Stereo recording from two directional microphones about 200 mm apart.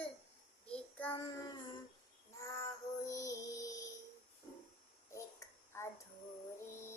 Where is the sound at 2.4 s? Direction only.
15° left (ahead or behind).